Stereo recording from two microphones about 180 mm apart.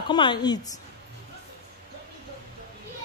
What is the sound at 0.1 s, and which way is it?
Speech, 25° left (ahead or behind).